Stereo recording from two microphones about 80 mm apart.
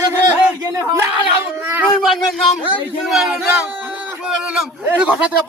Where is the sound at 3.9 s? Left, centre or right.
Centre.